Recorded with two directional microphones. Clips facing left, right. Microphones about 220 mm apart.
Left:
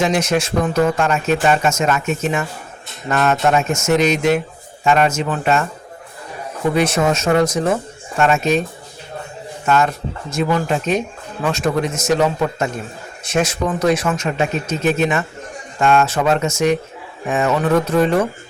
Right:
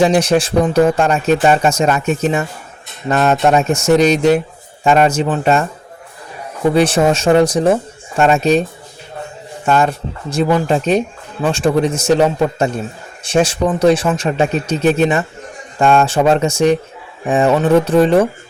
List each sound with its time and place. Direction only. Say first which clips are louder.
0.0 s speech: right 5 dB; 35° right (ahead or behind)
6.7 s speech: right 4 dB; 30° right (ahead or behind)
9.6 s speech: right 2 dB; 35° right (ahead or behind)